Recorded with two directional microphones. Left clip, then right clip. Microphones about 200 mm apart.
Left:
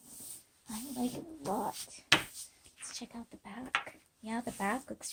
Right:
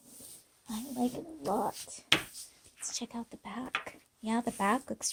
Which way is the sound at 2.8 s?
55° right (ahead or behind).